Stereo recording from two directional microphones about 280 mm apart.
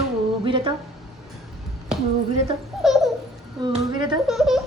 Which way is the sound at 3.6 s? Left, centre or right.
Centre.